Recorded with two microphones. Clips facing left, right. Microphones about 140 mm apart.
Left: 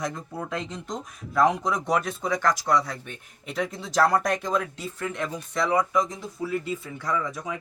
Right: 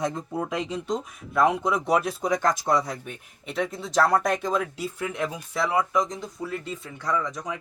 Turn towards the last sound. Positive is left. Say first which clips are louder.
# right 1 dB
turn(degrees=5)  # may be behind; listen again after turning